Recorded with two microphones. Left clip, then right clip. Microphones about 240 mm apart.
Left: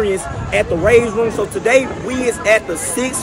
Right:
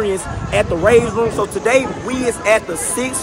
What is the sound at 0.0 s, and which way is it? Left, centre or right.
A man's voice, centre.